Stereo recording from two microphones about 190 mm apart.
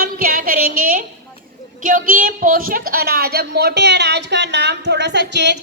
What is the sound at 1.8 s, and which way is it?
A woman's voice, 45° right (ahead or behind).